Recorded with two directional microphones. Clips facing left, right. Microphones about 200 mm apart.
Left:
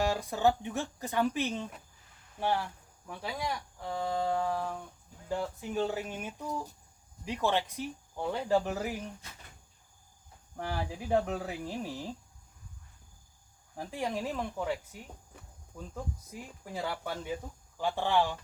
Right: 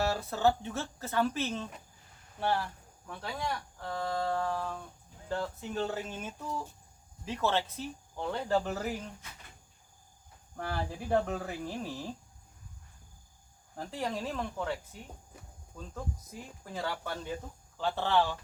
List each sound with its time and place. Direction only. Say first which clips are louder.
0.0 s speech: left 1 dB; 15° left (ahead or behind)
10.6 s speech: even; 15° left (ahead or behind)
13.7 s speech: left 1 dB; 15° left (ahead or behind)
16.6 s speech: left 1 dB; 10° left (ahead or behind)